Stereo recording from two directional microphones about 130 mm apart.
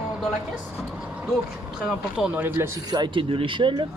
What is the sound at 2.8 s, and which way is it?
Speech, 35° right (ahead or behind).